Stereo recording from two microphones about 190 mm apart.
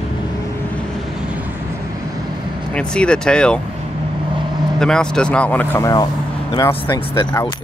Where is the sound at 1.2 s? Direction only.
5° right (ahead or behind).